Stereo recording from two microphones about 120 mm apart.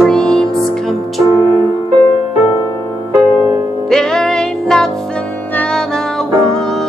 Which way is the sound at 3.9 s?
5° left (ahead or behind).